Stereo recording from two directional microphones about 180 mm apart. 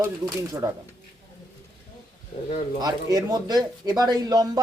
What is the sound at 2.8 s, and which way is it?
Speech, 20° right (ahead or behind).